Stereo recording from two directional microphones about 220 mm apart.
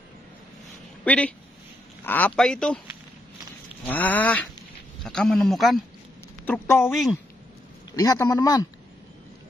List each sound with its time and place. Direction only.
1.0 s a man's voice: 5° left (ahead or behind)
3.8 s a man's voice: 10° left (ahead or behind)
7.9 s a man's voice: 15° left (ahead or behind)